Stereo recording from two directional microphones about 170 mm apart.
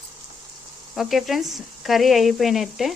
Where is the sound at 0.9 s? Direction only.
Centre (ahead or behind).